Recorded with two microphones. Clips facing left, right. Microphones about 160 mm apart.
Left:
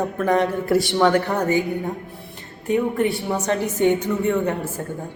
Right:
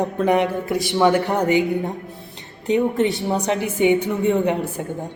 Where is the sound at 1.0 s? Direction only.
10° right (ahead or behind).